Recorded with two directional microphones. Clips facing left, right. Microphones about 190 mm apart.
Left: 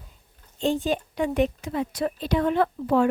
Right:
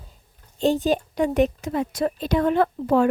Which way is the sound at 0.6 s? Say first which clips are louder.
Right 4 dB; 40° right (ahead or behind).